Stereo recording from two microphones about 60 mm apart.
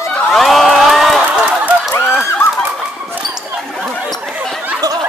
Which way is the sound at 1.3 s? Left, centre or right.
Centre.